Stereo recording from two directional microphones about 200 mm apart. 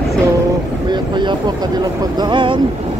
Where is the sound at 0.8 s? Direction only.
20° right (ahead or behind).